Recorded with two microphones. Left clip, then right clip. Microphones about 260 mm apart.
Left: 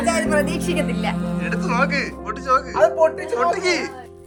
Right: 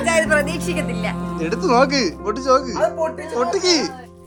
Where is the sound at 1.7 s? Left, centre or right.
Centre.